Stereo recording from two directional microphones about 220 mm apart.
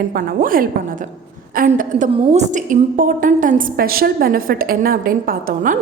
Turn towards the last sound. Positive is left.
turn(degrees=-40)  # may be behind; listen again after turning